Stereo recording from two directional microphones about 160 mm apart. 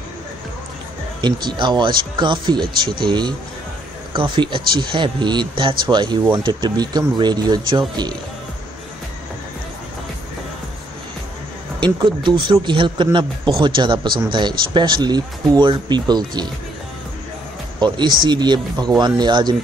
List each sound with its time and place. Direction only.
1.2 s speech: 25° right (ahead or behind)
11.8 s speech: 30° right (ahead or behind)
17.7 s speech: 30° right (ahead or behind)